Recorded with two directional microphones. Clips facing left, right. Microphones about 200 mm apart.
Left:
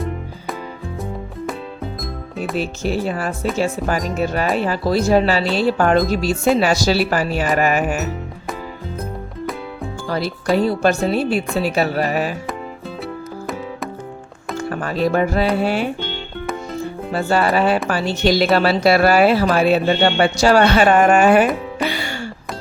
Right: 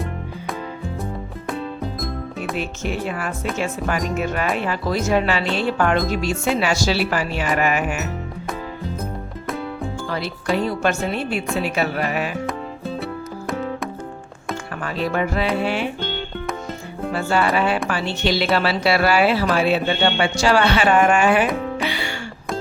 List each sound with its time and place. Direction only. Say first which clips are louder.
1.5 s music: right 3 dB; centre (ahead or behind)
2.6 s speech: left 6 dB; 35° left (ahead or behind)
10.1 s speech: left 5 dB; 40° left (ahead or behind)
14.7 s music: left 6 dB; 40° left (ahead or behind)
17.1 s speech: left 2 dB; 40° left (ahead or behind)
21.8 s music: left 2 dB; 45° left (ahead or behind)